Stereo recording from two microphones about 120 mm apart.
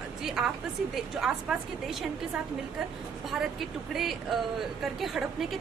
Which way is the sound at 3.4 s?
Centre (ahead or behind).